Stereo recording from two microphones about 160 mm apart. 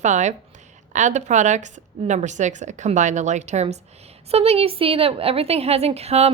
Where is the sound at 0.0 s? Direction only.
50° right (ahead or behind).